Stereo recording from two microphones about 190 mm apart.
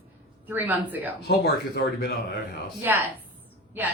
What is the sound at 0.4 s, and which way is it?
Speech, 10° right (ahead or behind).